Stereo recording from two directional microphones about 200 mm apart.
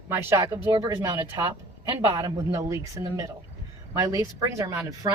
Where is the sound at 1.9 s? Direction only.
10° right (ahead or behind).